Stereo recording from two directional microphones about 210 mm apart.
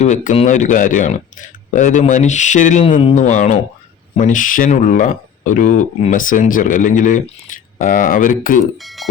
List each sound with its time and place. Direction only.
0.0 s speech: 35° left (ahead or behind)
8.8 s speech: centre (ahead or behind)